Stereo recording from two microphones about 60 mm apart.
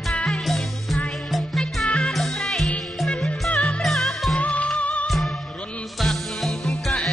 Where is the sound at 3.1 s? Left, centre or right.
Centre.